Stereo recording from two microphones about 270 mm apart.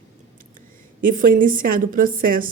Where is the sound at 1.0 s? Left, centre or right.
Right.